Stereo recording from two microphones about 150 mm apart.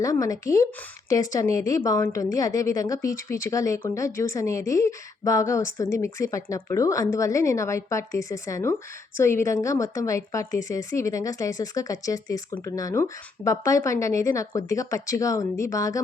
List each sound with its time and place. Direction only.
0.0 s a woman's voice: 20° left (ahead or behind)